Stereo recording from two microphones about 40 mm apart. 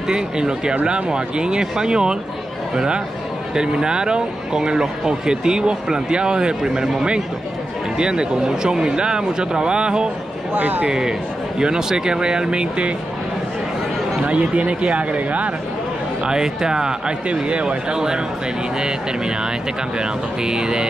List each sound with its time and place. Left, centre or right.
0.1 s speech: centre
10.5 s speech: right
10.9 s speech: centre
14.2 s speech: right
16.3 s speech: centre
17.3 s speech: right
17.9 s speech: centre
20.0 s speech: centre